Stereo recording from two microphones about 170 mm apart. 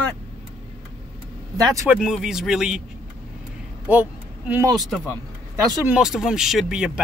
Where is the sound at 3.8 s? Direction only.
10° right (ahead or behind).